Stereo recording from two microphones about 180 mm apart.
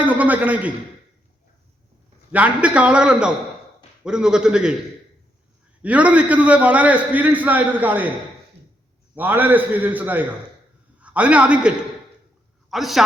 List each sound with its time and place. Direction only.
0.0 s a man's voice: 10° right (ahead or behind)
2.3 s a man's voice: 5° right (ahead or behind)
5.8 s a man's voice: 5° right (ahead or behind)
9.1 s a man's voice: 10° right (ahead or behind)